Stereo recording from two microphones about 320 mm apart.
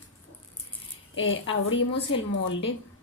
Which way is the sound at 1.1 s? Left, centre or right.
Left.